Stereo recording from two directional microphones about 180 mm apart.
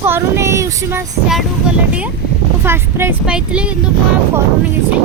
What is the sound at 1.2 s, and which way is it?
Vehicle, 5° right (ahead or behind).